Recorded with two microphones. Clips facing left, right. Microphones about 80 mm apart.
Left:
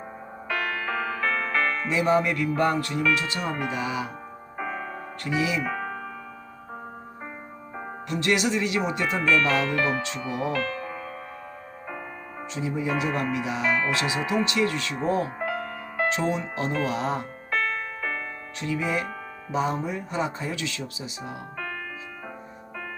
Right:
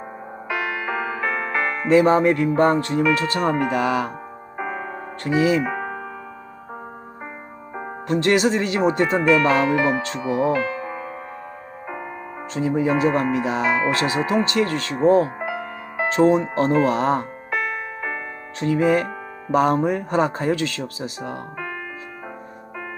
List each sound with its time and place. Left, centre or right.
0.4 s music: centre
1.9 s speech: right
3.2 s speech: right
3.6 s speech: right
4.5 s music: centre
5.2 s speech: right
5.6 s music: centre
8.0 s speech: right
9.2 s speech: centre
12.5 s speech: right
15.4 s music: centre
16.0 s speech: right
17.5 s music: centre
18.6 s speech: right